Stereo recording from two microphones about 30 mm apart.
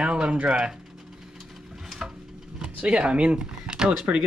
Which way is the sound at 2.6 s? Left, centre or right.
Right.